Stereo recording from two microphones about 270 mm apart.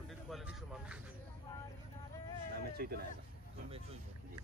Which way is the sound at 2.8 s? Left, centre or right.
Right.